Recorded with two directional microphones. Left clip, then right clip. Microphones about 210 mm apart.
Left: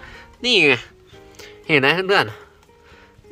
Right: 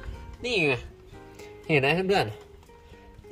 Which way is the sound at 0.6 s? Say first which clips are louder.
Left 9 dB; 35° left (ahead or behind).